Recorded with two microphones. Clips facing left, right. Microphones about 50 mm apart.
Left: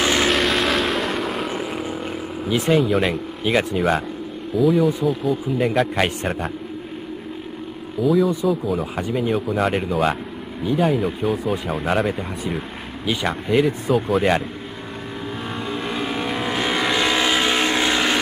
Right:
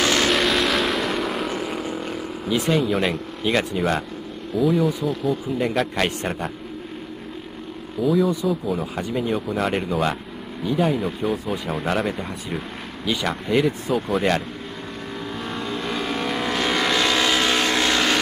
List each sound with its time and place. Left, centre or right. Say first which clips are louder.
0.0 s vehicle: left 1 dB; centre
0.3 s vehicle: left 1 dB; centre
2.7 s speech: left 4 dB; centre
8.0 s speech: left 2 dB; centre
15.5 s vehicle: left 1 dB; centre